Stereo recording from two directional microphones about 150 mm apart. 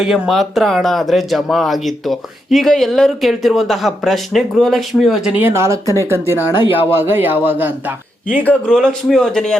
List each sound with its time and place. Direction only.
0.0 s speech: centre (ahead or behind); by 5.8 s 20° right (ahead or behind)
6.5 s speech: 35° left (ahead or behind)
6.9 s a man's voice: 15° right (ahead or behind)
8.4 s speech: 5° left (ahead or behind)